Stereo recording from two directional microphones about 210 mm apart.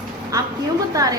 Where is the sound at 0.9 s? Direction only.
15° right (ahead or behind).